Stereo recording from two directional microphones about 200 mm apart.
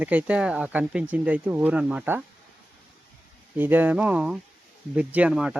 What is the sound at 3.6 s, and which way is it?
Speech, 10° right (ahead or behind).